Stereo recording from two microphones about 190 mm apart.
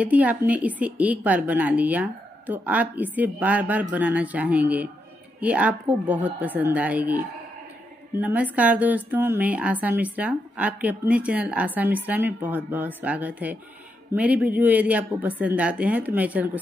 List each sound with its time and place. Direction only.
0.0 s a woman's voice: 10° right (ahead or behind)